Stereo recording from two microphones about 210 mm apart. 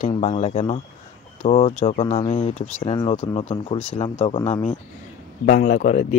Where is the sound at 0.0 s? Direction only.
30° left (ahead or behind).